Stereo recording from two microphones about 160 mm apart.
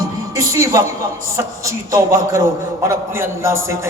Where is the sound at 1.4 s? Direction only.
20° right (ahead or behind).